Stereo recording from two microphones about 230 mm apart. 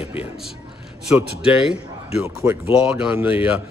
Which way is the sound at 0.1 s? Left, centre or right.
Centre.